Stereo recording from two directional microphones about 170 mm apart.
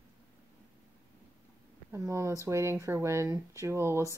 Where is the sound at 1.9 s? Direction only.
15° right (ahead or behind).